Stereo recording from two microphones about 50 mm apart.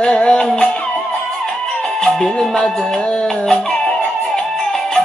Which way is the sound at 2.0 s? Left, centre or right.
Centre.